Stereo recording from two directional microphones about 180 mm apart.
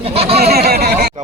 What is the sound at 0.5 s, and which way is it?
Speech, 60° right (ahead or behind).